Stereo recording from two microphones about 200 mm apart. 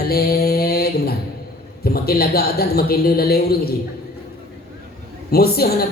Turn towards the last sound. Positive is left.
turn(degrees=50)  # may be behind; listen again after turning